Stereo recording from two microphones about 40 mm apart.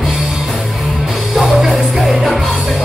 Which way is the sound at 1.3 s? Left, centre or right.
Centre.